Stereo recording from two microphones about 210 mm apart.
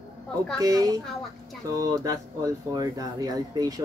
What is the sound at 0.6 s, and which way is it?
Speech, 15° right (ahead or behind).